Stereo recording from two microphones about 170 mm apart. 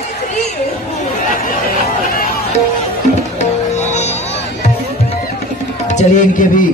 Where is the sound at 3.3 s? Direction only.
40° left (ahead or behind).